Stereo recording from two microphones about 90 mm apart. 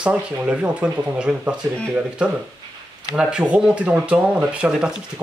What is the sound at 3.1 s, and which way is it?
Speech, 10° right (ahead or behind).